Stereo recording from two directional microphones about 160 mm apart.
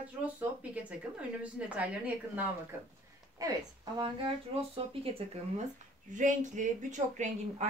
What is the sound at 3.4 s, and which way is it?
Speech, 20° right (ahead or behind).